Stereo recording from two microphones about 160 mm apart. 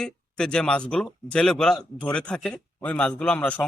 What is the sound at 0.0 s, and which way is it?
Speech, 5° left (ahead or behind).